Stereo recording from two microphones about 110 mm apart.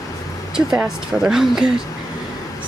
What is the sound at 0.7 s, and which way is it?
Speech, 5° right (ahead or behind).